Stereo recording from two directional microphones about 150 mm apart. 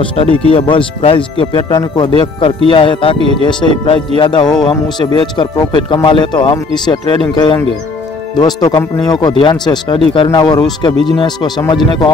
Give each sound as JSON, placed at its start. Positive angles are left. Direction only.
{"t": 0.0, "sound": "speech", "side_deg": 35}
{"t": 3.2, "sound": "speech", "side_deg": -40}
{"t": 3.4, "sound": "speech", "side_deg": 35}